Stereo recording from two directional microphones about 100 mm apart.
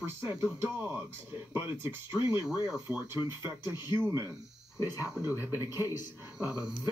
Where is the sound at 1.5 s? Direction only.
25° right (ahead or behind).